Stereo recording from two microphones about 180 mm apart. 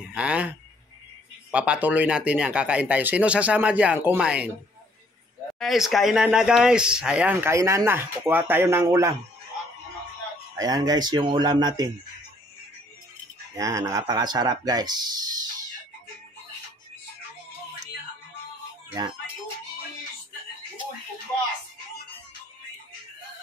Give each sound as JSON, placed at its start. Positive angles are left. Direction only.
{"t": 0.1, "sound": "speech", "side_deg": -5}
{"t": 5.6, "sound": "speech", "side_deg": 0}
{"t": 10.5, "sound": "speech", "side_deg": -20}
{"t": 13.6, "sound": "speech", "side_deg": -15}